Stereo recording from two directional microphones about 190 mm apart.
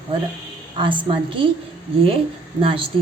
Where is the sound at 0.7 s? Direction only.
25° right (ahead or behind).